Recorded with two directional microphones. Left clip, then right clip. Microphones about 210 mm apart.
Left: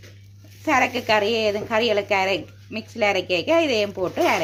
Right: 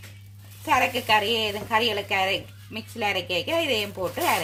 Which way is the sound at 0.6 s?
10° left (ahead or behind).